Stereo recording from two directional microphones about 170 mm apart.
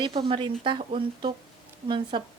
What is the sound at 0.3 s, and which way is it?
A woman's voice, 30° right (ahead or behind).